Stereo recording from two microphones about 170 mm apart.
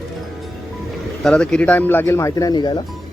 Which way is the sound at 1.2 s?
5° left (ahead or behind).